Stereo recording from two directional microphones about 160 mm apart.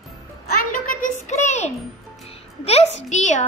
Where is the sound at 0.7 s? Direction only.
50° left (ahead or behind).